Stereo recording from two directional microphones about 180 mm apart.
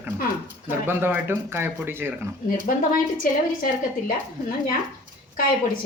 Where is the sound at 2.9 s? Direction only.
50° left (ahead or behind).